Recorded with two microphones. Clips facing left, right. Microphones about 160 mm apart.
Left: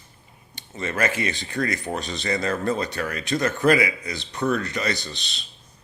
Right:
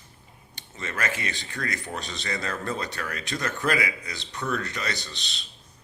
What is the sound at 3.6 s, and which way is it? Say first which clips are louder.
A man's voice: left 7 dB; 10° left (ahead or behind).